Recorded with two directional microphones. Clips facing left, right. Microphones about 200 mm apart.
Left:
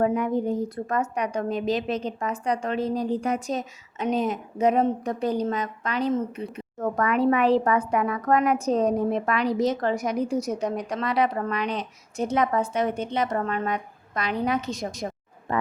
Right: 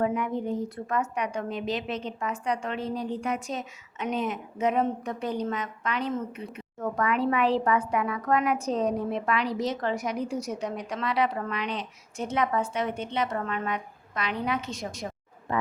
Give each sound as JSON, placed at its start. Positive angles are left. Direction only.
{"t": 0.0, "sound": "a woman's voice", "side_deg": 40}